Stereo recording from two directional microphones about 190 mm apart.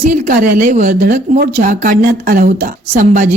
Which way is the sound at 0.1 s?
45° right (ahead or behind).